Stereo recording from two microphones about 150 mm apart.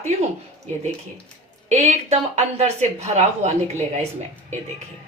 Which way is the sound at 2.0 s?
45° right (ahead or behind).